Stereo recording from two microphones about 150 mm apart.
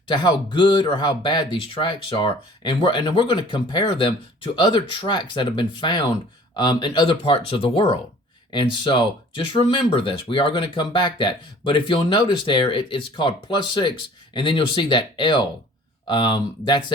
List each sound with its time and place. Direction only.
0.1 s speech: 30° left (ahead or behind)